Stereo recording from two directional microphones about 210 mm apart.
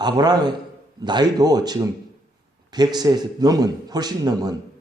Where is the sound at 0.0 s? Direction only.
20° right (ahead or behind).